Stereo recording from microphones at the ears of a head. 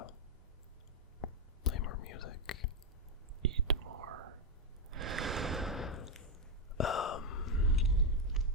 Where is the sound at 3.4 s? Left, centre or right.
Right.